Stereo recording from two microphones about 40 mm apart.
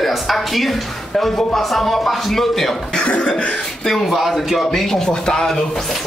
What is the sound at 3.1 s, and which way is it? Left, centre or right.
Cough, left.